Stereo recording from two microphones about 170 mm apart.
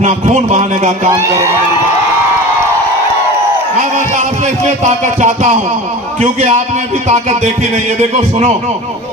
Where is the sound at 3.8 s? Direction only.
45° right (ahead or behind).